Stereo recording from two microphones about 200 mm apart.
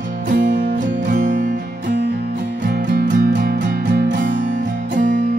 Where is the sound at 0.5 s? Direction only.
45° right (ahead or behind).